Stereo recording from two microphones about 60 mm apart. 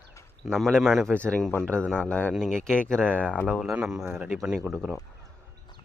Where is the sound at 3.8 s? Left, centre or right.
Centre.